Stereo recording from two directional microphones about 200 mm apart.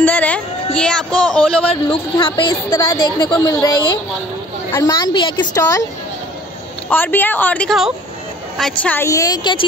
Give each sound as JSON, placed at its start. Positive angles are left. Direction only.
{"t": 0.0, "sound": "a sound", "side_deg": 10}
{"t": 1.7, "sound": "a woman's voice", "side_deg": 25}
{"t": 4.7, "sound": "a woman's voice", "side_deg": 20}
{"t": 6.9, "sound": "a woman's voice", "side_deg": 10}